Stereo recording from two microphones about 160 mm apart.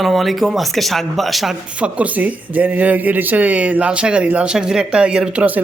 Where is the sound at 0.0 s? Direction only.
Centre (ahead or behind).